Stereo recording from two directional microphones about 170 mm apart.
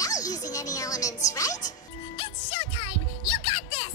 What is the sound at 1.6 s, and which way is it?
Music, 40° left (ahead or behind).